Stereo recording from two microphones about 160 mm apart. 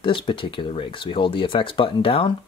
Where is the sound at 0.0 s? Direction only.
30° left (ahead or behind).